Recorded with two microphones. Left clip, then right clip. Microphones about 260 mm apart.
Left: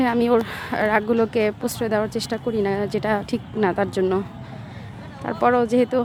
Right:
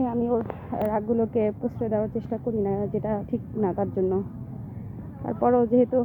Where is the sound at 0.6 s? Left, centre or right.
Left.